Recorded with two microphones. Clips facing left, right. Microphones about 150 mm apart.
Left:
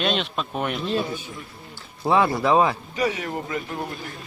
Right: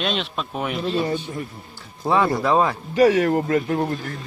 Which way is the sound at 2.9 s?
50° right (ahead or behind).